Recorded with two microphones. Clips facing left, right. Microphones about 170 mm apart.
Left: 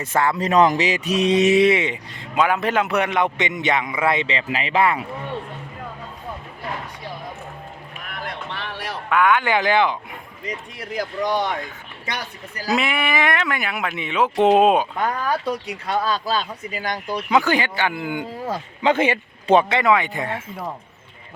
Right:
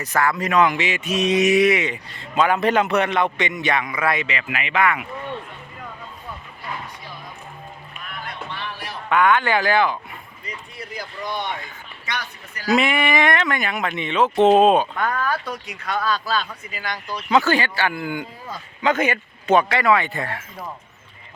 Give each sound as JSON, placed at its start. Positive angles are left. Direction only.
{"t": 0.0, "sound": "a man's voice", "side_deg": 25}
{"t": 2.3, "sound": "a man's voice", "side_deg": 10}
{"t": 8.1, "sound": "music", "side_deg": 80}
{"t": 9.0, "sound": "speech", "side_deg": 5}
{"t": 10.4, "sound": "speech", "side_deg": 90}
{"t": 12.0, "sound": "a man's voice", "side_deg": 35}
{"t": 12.7, "sound": "speech", "side_deg": 0}
{"t": 15.4, "sound": "a man's voice", "side_deg": 30}
{"t": 16.7, "sound": "speech", "side_deg": 45}
{"t": 17.2, "sound": "a man's voice", "side_deg": 15}